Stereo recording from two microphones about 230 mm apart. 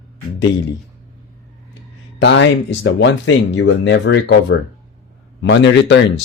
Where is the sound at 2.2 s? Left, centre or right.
Left.